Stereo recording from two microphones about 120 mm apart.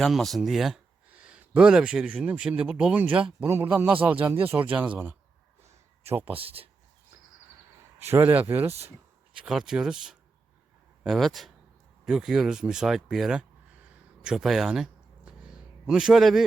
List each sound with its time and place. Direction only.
0.0 s speech: centre (ahead or behind); by 6.4 s 15° right (ahead or behind)
6.4 s speech: 50° right (ahead or behind)
8.1 s speech: 15° right (ahead or behind)
9.3 s speech: 5° right (ahead or behind)
14.3 s a sound: 5° right (ahead or behind)